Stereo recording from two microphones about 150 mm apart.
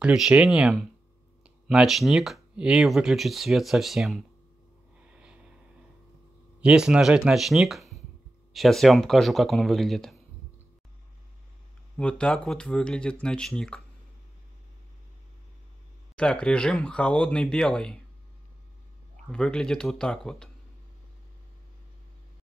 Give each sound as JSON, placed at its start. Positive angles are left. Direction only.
{"t": 0.0, "sound": "speech", "side_deg": -5}
{"t": 5.1, "sound": "snort", "side_deg": -10}
{"t": 6.6, "sound": "speech", "side_deg": -5}
{"t": 12.0, "sound": "speech", "side_deg": 5}
{"t": 16.2, "sound": "speech", "side_deg": 5}
{"t": 19.2, "sound": "speech", "side_deg": 5}